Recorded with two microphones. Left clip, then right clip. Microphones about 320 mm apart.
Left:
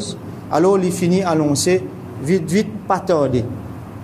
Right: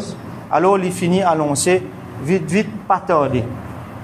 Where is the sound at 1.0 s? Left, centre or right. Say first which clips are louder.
Even; right.